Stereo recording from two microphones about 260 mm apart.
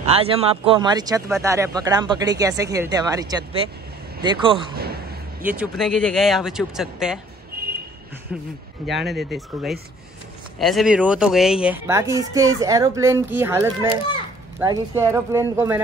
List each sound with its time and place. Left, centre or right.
0.0 s speech: right
4.7 s a sound: right
5.4 s speech: centre
7.6 s vehicle: right
8.3 s speech: centre